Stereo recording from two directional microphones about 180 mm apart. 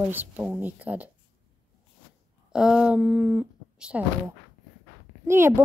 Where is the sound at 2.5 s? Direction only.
5° right (ahead or behind).